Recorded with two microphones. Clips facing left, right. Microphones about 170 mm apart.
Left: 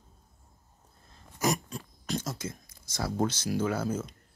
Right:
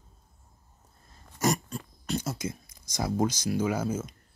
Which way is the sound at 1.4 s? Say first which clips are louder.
Right 2 dB; centre (ahead or behind).